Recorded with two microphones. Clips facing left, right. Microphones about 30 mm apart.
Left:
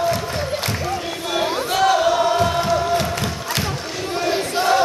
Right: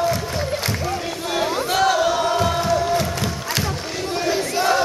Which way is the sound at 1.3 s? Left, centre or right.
Centre.